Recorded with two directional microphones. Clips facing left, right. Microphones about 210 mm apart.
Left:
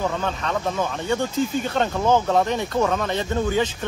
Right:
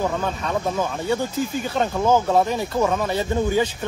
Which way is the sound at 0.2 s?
10° right (ahead or behind).